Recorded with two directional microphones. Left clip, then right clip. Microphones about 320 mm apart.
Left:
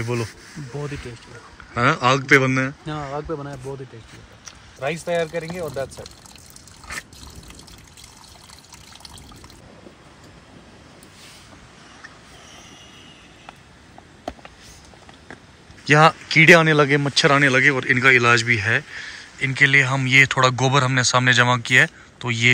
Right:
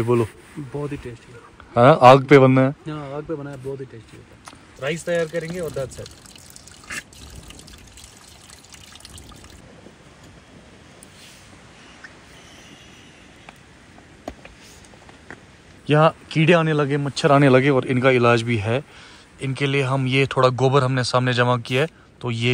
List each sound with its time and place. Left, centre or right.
0.0 s speech: centre
1.7 s a man's voice: centre
4.8 s speech: centre
15.8 s speech: centre
17.4 s speech: centre